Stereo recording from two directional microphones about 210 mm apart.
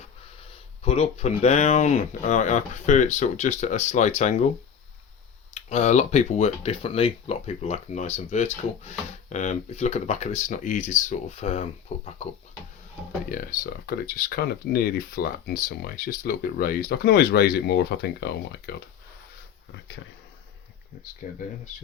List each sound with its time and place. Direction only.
0.9 s speech: 30° left (ahead or behind)
5.5 s speech: 30° left (ahead or behind)
13.3 s speech: 45° left (ahead or behind)
21.2 s speech: 40° left (ahead or behind)